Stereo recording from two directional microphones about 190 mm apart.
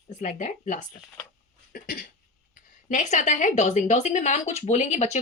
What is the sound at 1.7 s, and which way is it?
Cough, 50° left (ahead or behind).